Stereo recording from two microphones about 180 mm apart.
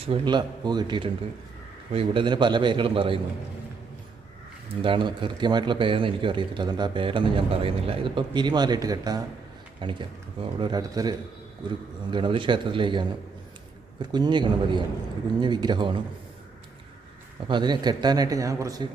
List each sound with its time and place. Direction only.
0.0 s speech: 30° right (ahead or behind)
4.8 s speech: 30° right (ahead or behind)
17.5 s speech: 25° right (ahead or behind)